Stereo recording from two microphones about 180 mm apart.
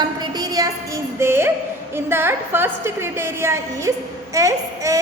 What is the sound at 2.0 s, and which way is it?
A woman's voice, 10° right (ahead or behind).